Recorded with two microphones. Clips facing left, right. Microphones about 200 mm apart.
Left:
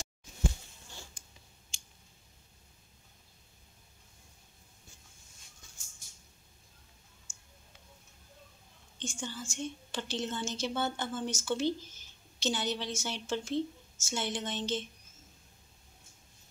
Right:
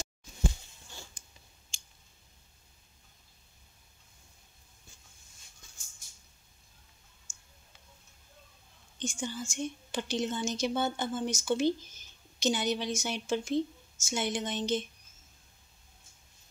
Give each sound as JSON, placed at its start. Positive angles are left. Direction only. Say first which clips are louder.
{"t": 7.3, "sound": "clicking", "louder": "left 1 dB", "side_deg": 5}
{"t": 9.0, "sound": "a woman's voice", "louder": "right 4 dB", "side_deg": -10}